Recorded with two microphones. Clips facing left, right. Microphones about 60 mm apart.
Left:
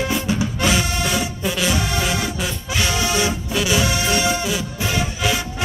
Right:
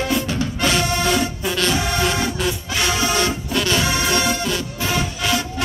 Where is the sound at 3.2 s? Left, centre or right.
Centre.